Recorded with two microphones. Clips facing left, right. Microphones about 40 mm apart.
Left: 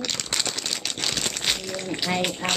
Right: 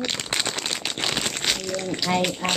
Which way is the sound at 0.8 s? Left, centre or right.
Right.